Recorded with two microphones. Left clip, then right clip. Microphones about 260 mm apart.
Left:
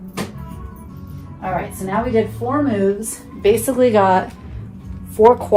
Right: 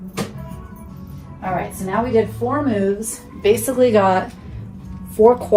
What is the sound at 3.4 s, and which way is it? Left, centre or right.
A woman's voice, left.